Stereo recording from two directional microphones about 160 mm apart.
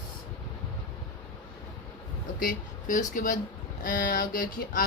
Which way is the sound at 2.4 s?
55° left (ahead or behind).